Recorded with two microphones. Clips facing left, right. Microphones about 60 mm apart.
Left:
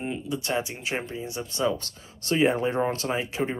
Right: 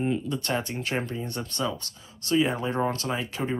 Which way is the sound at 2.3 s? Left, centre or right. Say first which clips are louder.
Left 2 dB; left.